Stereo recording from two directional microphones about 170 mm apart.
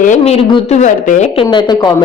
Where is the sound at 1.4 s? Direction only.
30° left (ahead or behind).